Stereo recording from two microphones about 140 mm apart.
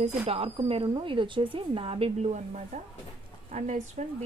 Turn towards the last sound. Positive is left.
turn(degrees=-60)  # may be behind; listen again after turning